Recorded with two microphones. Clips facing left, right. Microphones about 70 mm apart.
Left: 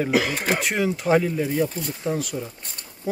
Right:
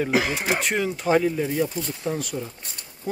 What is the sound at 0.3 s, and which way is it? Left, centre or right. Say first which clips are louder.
Speech: left 1 dB; left.